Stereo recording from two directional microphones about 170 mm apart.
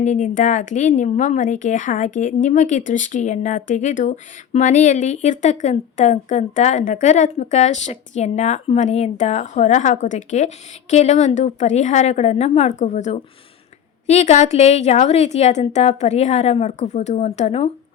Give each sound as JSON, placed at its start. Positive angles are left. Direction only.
{"t": 0.0, "sound": "a woman's voice", "side_deg": 45}